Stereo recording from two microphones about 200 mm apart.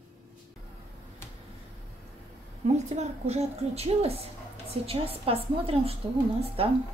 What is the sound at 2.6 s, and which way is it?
A woman's voice, 35° right (ahead or behind).